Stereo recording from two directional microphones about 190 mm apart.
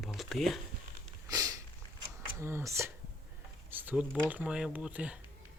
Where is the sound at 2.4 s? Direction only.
15° right (ahead or behind).